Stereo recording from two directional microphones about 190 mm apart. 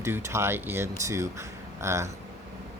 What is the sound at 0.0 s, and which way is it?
Speech, 15° right (ahead or behind).